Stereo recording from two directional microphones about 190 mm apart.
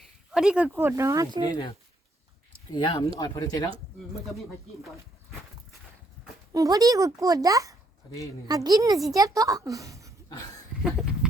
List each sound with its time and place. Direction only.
0.3 s speech: 5° right (ahead or behind)
2.7 s speech: 25° left (ahead or behind)
4.3 s speech: centre (ahead or behind)
6.5 s a woman's voice: 20° right (ahead or behind)
10.8 s a sound: 5° right (ahead or behind)